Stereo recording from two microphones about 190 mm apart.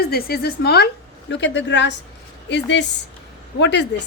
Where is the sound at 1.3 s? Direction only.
70° left (ahead or behind).